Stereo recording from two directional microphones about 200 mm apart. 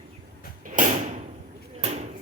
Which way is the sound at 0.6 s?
40° right (ahead or behind).